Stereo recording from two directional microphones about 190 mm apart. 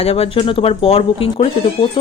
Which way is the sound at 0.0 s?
30° left (ahead or behind).